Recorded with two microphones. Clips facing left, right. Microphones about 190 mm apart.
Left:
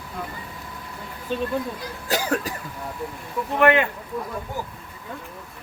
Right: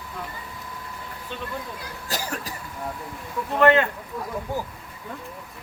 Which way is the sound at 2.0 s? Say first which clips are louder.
Left 7 dB; 60° left (ahead or behind).